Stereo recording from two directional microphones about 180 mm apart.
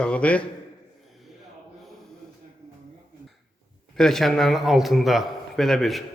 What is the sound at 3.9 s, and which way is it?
A man's voice, centre (ahead or behind).